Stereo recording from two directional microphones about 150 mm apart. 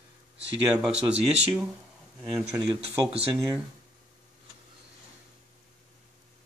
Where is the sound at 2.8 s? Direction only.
45° right (ahead or behind).